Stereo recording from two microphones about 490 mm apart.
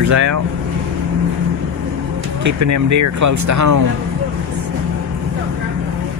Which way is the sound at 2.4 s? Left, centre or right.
Right.